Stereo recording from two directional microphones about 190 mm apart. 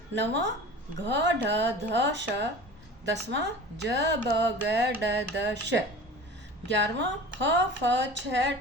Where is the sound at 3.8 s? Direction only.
65° right (ahead or behind).